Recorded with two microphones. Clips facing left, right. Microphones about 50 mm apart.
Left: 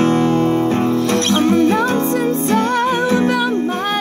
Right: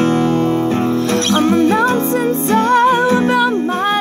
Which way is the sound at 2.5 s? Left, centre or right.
Right.